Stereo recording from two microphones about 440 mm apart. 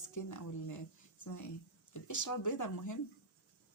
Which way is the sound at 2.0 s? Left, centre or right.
Left.